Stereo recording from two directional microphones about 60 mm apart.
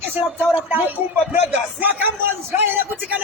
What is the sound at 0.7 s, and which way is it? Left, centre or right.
Speech, right.